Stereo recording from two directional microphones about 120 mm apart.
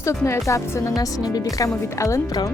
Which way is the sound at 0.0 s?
25° left (ahead or behind).